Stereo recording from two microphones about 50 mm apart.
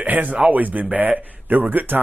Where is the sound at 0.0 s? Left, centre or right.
Right.